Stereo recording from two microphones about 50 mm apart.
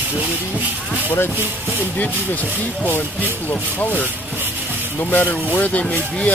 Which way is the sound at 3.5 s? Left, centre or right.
Left.